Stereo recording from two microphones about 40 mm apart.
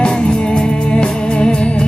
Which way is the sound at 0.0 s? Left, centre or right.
Left.